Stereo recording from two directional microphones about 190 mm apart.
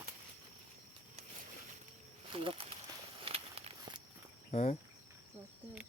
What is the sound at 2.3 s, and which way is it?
Speech, 25° right (ahead or behind).